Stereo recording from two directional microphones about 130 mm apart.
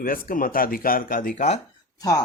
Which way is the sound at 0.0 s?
90° left.